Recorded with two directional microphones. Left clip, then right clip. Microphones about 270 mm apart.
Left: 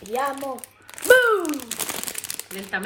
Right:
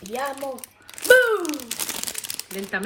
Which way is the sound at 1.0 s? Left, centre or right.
Centre.